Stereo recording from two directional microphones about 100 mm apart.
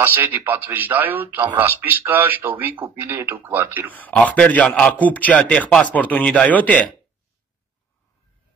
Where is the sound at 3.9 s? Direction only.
15° left (ahead or behind).